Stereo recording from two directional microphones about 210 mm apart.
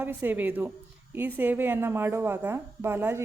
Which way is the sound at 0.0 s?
10° right (ahead or behind).